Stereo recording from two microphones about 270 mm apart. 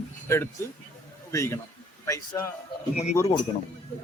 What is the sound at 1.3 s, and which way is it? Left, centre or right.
Speech, centre.